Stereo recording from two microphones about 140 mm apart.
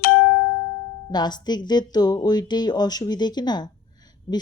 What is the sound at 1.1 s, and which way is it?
Speech, 30° left (ahead or behind).